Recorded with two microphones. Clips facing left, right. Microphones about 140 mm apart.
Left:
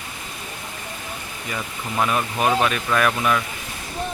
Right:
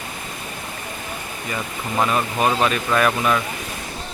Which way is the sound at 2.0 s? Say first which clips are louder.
Even; 5° left (ahead or behind).